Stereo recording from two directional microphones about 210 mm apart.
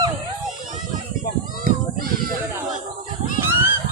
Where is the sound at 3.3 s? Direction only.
10° right (ahead or behind).